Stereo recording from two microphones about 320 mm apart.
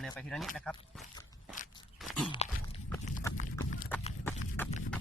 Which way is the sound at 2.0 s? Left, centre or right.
Centre.